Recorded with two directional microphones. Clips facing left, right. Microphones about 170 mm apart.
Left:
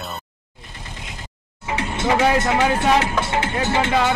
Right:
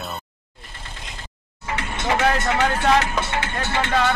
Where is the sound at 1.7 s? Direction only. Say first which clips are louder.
Left 3 dB; 25° left (ahead or behind).